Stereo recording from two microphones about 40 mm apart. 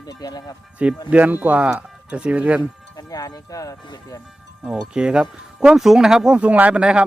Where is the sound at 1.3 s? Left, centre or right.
Right.